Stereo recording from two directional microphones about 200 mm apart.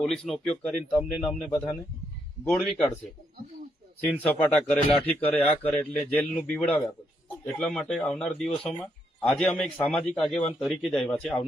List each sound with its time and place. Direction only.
0.0 s a man's voice: centre (ahead or behind)
1.5 s speech: 15° left (ahead or behind)
2.4 s a man's voice: 5° left (ahead or behind)
4.2 s a man's voice: 5° left (ahead or behind)